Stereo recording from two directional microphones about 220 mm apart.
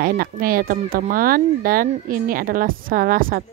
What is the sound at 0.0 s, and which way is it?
A woman's voice, 40° right (ahead or behind).